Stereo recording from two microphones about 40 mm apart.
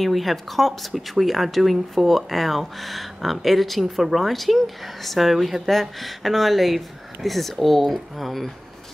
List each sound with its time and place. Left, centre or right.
0.0 s speech: centre